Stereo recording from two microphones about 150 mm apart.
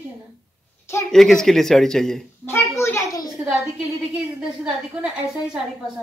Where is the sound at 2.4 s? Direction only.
15° left (ahead or behind).